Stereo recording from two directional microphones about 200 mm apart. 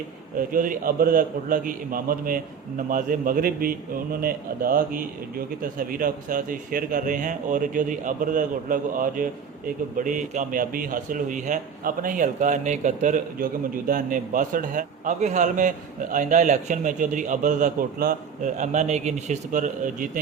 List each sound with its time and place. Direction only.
0.3 s a man's voice: 45° right (ahead or behind)